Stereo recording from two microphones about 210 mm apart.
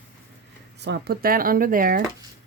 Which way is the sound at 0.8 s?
50° right (ahead or behind).